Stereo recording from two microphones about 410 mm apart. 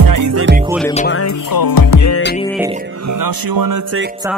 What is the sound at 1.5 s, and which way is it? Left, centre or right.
Music, left.